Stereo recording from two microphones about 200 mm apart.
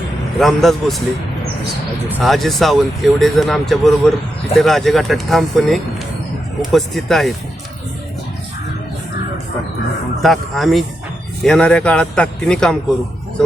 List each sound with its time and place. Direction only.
0.3 s speech: centre (ahead or behind)
2.1 s speech: centre (ahead or behind)
10.2 s speech: centre (ahead or behind)